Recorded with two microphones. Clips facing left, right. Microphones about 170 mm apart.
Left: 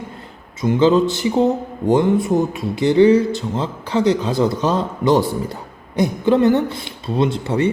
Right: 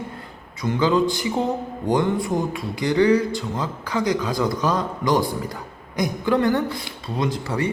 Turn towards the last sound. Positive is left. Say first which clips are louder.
# left 6 dB
turn(degrees=25)  # may be behind; listen again after turning